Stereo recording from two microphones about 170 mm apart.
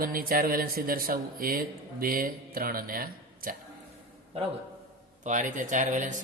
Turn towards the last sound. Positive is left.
turn(degrees=-50)  # may be behind; listen again after turning